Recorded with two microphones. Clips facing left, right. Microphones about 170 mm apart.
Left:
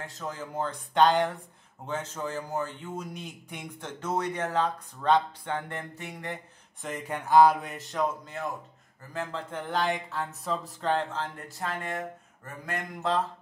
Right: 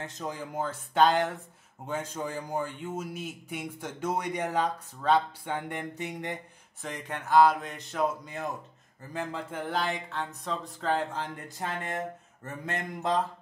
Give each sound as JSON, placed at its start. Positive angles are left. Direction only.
{"t": 0.0, "sound": "a man's voice", "side_deg": -20}
{"t": 6.8, "sound": "speech", "side_deg": 5}
{"t": 9.1, "sound": "speech", "side_deg": -10}
{"t": 11.4, "sound": "speech", "side_deg": -20}